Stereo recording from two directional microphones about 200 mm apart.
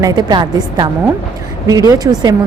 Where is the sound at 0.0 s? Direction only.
20° right (ahead or behind).